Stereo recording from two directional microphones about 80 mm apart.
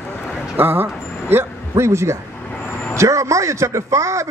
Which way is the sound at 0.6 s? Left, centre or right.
Right.